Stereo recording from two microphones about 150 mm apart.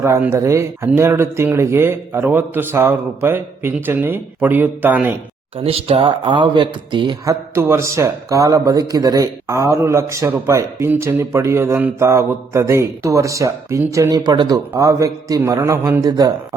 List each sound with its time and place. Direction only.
0.0 s speech: 15° right (ahead or behind)
5.5 s speech: 40° right (ahead or behind)
7.5 s a man's voice: 20° right (ahead or behind)